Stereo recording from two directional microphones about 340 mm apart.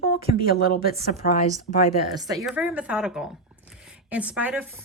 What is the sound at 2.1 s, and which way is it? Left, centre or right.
A woman's voice, centre.